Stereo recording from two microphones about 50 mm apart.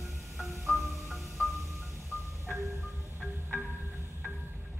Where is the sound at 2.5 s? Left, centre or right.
Right.